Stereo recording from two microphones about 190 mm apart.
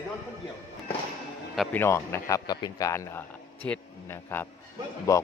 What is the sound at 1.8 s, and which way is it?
A man's voice, 15° left (ahead or behind).